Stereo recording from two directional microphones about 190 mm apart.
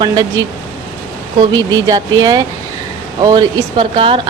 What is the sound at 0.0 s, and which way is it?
Speech, 20° right (ahead or behind).